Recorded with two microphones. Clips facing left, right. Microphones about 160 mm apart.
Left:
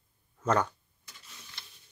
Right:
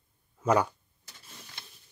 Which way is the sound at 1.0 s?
50° right (ahead or behind).